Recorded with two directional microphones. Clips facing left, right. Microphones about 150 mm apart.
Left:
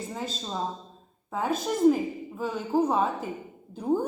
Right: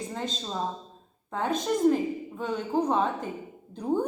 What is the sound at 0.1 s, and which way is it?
A woman's voice, 5° left (ahead or behind).